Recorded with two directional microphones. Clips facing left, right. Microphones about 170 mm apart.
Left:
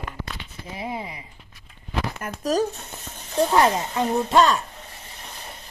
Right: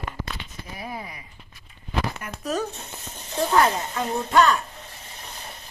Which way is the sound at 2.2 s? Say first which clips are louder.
Left 5 dB; 40° left (ahead or behind).